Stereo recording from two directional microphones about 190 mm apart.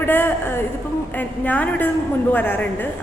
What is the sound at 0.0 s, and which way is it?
A woman's voice, 10° left (ahead or behind).